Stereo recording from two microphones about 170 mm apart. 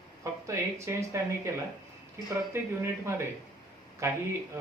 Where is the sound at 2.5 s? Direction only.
15° right (ahead or behind).